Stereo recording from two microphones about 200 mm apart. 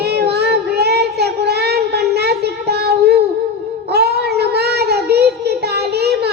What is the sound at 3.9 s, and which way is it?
Child singing, 55° right (ahead or behind).